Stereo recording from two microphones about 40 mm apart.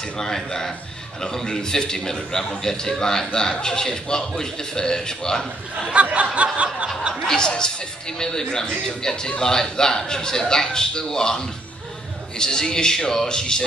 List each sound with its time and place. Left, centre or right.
0.2 s a man's voice: centre
6.1 s a sound: right
7.2 s a man's voice: centre